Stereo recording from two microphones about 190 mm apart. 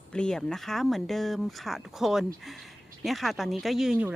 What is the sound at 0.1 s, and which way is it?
Speech, 5° left (ahead or behind).